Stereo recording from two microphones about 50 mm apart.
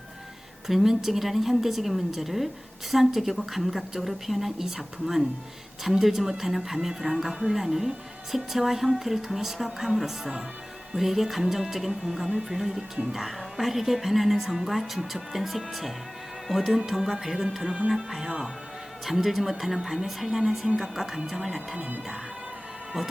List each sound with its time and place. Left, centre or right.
0.7 s music: centre
17.8 s speech: centre
19.0 s music: centre
20.7 s speech: centre
21.2 s music: centre
21.8 s music: right
23.0 s music: centre